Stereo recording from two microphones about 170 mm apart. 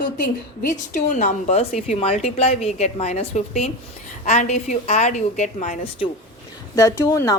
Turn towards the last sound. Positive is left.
turn(degrees=15)  # may be behind; listen again after turning